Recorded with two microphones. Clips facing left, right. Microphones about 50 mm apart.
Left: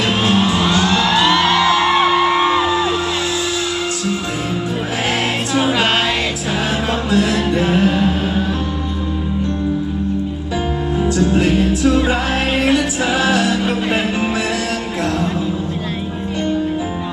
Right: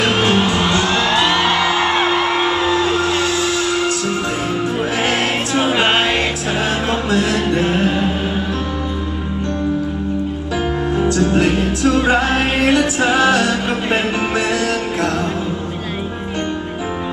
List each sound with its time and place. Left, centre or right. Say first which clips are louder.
0.0 s music: right 1 dB; right
0.6 s music: left 1 dB; right
5.5 s music: even; right
7.6 s music: left 1 dB; centre
11.2 s music: left 3 dB; right